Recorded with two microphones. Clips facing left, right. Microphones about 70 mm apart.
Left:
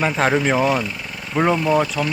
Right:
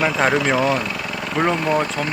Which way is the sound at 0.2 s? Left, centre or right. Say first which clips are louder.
Even; centre.